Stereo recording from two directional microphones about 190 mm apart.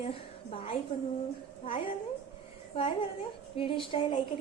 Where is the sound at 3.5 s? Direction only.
30° left (ahead or behind).